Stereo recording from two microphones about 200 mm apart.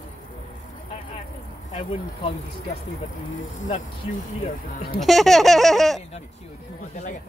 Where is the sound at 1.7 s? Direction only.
30° left (ahead or behind).